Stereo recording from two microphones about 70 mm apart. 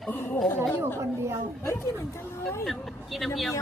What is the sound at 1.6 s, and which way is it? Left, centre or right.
Speech, left.